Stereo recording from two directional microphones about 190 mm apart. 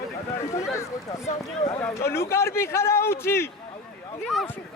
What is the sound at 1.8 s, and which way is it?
Speech, 15° left (ahead or behind).